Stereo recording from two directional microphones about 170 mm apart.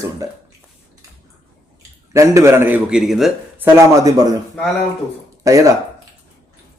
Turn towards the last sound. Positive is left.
turn(degrees=-20)  # may be behind; listen again after turning